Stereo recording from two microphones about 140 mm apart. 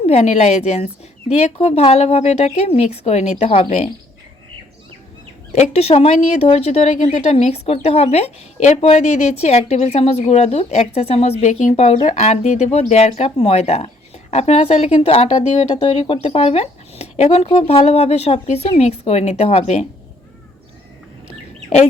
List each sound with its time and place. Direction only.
0.0 s speech: 45° left (ahead or behind)
5.5 s speech: 50° left (ahead or behind)